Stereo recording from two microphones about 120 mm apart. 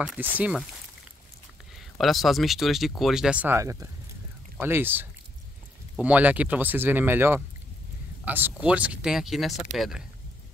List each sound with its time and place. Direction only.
0.2 s speech: 15° right (ahead or behind)
2.0 s speech: centre (ahead or behind)
3.5 s speech: 25° right (ahead or behind); by 10.0 s 5° right (ahead or behind)